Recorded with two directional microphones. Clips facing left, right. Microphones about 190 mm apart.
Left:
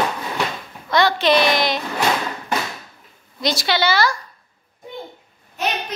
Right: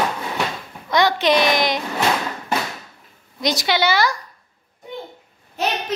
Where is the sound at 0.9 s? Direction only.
15° right (ahead or behind).